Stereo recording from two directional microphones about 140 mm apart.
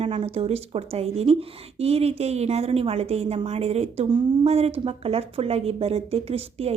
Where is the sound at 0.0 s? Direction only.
45° right (ahead or behind).